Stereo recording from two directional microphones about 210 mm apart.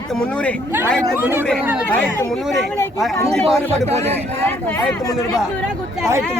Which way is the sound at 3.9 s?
30° right (ahead or behind).